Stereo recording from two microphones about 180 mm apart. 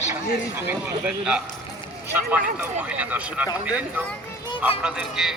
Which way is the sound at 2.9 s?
10° right (ahead or behind).